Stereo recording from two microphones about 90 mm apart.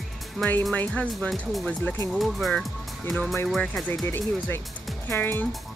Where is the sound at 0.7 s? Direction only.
15° left (ahead or behind).